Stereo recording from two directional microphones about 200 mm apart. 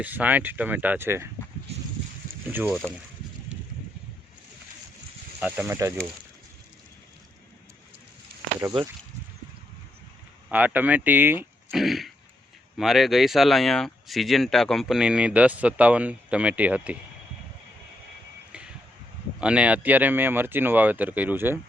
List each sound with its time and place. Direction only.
0.0 s speech: 10° right (ahead or behind)
2.5 s speech: 10° right (ahead or behind)
5.4 s speech: 10° right (ahead or behind)
8.6 s speech: 15° right (ahead or behind)
10.5 s speech: 10° right (ahead or behind)
19.4 s speech: 5° right (ahead or behind)